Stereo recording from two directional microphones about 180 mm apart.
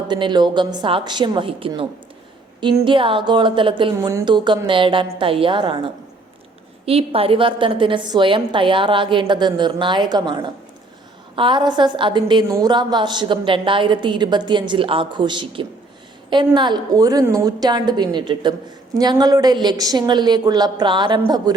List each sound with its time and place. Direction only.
0.1 s a woman's voice: 25° right (ahead or behind)
3.9 s a woman's voice: 15° right (ahead or behind)